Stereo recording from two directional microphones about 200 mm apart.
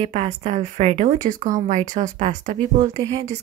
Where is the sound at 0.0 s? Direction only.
35° right (ahead or behind).